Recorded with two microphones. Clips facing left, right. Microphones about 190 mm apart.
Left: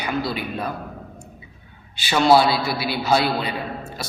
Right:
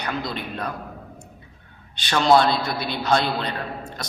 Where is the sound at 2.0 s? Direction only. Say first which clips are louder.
Left 2 dB; 5° left (ahead or behind).